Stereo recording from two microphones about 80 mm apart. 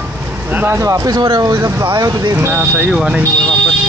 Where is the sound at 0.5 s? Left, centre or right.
Right.